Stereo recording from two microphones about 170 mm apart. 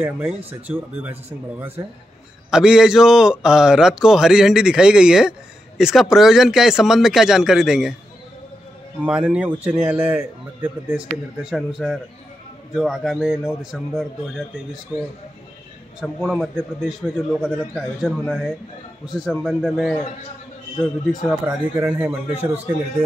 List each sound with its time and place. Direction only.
0.0 s speech: 5° right (ahead or behind)
2.5 s a man's voice: 5° right (ahead or behind)
9.0 s a man's voice: 5° right (ahead or behind)